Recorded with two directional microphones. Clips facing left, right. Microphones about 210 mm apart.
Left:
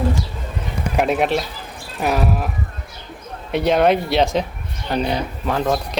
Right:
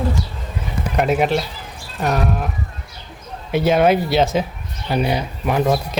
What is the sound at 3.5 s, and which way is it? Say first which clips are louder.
Speech: right 1 dB; 5° right (ahead or behind).